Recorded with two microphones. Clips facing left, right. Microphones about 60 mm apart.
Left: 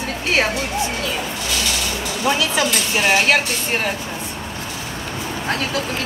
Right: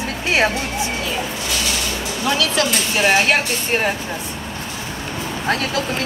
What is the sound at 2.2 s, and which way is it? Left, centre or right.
Speech, left.